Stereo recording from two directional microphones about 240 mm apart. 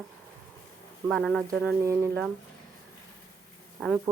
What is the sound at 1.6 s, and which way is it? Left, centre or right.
Speech, centre.